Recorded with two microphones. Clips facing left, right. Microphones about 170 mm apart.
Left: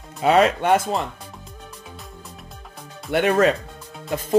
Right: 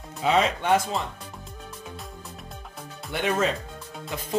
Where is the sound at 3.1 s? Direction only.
65° left (ahead or behind).